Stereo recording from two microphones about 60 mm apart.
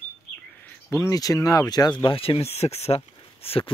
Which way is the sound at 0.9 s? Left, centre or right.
Left.